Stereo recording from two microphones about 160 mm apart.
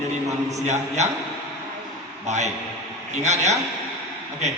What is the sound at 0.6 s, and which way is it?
Speech, 45° right (ahead or behind).